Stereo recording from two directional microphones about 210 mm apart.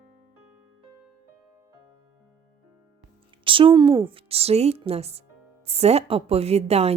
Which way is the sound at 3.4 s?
25° right (ahead or behind).